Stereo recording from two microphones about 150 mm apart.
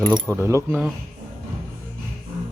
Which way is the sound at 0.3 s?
15° right (ahead or behind).